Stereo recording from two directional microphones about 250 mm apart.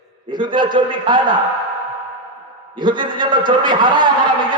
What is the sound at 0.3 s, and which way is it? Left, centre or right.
A man's voice, centre.